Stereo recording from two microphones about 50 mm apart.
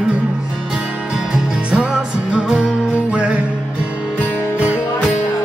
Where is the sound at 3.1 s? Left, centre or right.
Right.